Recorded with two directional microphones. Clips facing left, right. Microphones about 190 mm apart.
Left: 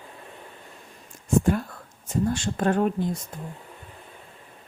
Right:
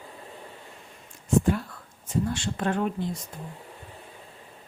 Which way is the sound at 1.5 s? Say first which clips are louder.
Left 2 dB; 45° left (ahead or behind).